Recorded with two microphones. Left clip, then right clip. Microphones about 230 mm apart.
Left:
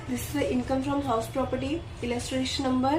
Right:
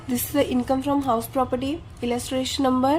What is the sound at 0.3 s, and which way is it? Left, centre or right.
A woman's voice, right.